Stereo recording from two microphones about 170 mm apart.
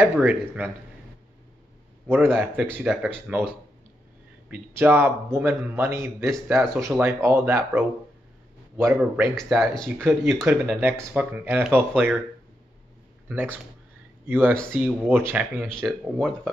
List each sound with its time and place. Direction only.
0.0 s a man's voice: 10° right (ahead or behind)
2.0 s a man's voice: 10° right (ahead or behind)
9.3 s speech: centre (ahead or behind)
10.4 s a man's voice: 10° right (ahead or behind)
13.3 s a man's voice: 10° right (ahead or behind)
14.5 s speech: 5° left (ahead or behind)
14.8 s a man's voice: 10° right (ahead or behind)
15.7 s speech: 5° left (ahead or behind)